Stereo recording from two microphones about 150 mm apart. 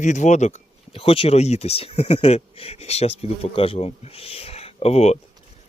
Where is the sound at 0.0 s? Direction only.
50° left (ahead or behind).